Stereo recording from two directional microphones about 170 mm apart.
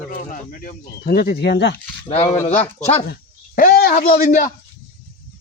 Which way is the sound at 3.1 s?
60° left (ahead or behind).